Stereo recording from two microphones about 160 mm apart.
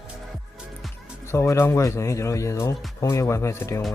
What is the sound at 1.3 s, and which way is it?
Speech, 15° left (ahead or behind).